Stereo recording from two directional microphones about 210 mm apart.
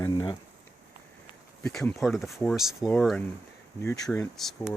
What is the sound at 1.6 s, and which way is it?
Speech, 5° left (ahead or behind).